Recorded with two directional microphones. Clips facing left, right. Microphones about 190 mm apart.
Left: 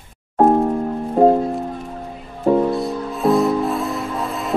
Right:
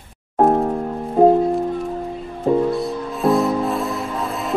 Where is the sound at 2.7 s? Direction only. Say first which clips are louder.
Left 1 dB; centre (ahead or behind).